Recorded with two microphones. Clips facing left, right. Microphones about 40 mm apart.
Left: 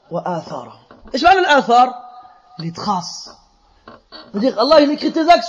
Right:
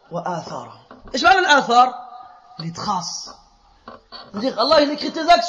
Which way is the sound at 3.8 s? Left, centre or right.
Left.